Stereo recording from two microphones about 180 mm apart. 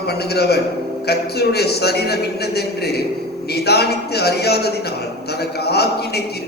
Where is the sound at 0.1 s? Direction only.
65° left (ahead or behind).